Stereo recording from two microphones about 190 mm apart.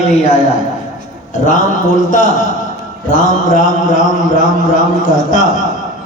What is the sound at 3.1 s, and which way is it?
A man's voice, 45° left (ahead or behind).